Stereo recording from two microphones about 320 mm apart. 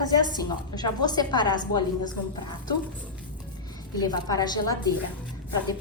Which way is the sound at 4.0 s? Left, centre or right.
Centre.